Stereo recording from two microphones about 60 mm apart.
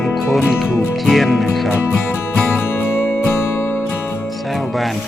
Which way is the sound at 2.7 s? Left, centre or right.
Left.